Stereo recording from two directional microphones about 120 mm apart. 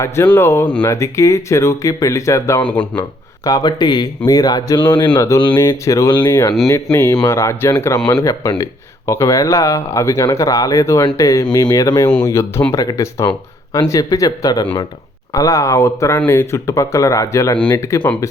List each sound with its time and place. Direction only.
0.3 s speech: 20° left (ahead or behind)
2.6 s speech: 10° left (ahead or behind)
3.4 s speech: 35° left (ahead or behind)
5.6 s speech: 25° left (ahead or behind)